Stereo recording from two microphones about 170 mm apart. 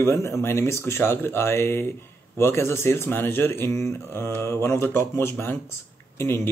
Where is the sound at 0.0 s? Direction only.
15° left (ahead or behind).